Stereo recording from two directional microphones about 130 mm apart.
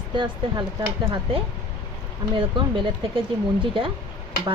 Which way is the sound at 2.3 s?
45° right (ahead or behind).